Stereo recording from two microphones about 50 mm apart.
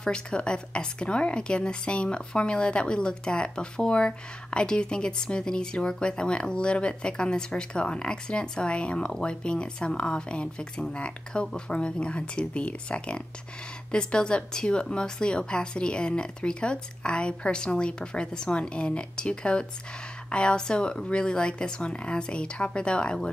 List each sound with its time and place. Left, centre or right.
0.0 s a woman's voice: centre